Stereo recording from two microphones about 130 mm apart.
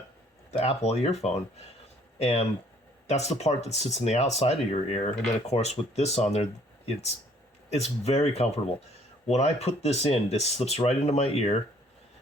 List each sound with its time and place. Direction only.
0.5 s speech: 55° left (ahead or behind)